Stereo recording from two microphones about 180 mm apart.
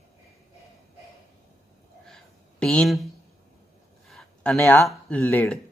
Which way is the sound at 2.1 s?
5° left (ahead or behind).